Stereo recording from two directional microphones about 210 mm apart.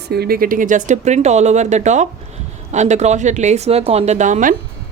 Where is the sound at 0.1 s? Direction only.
45° right (ahead or behind).